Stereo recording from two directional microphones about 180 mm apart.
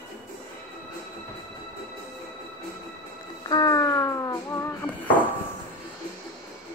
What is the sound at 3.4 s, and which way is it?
Music, 20° left (ahead or behind).